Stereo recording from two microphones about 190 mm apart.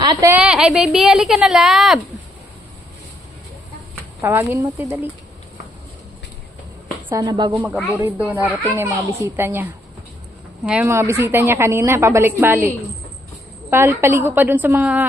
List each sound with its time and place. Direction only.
0.0 s a sound: 20° right (ahead or behind)
0.3 s a woman's voice: 5° right (ahead or behind)
4.2 s a woman's voice: 10° right (ahead or behind)
7.1 s a woman's voice: 20° right (ahead or behind)
8.0 s a woman's voice: 10° right (ahead or behind)
13.7 s a woman's voice: 10° right (ahead or behind)